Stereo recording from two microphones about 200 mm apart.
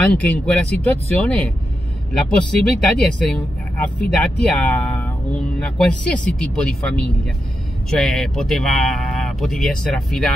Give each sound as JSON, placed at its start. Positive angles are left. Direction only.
{"t": 0.0, "sound": "speech", "side_deg": 5}